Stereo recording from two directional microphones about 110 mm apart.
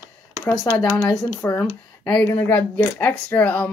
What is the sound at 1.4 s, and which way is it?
Speech, 30° left (ahead or behind).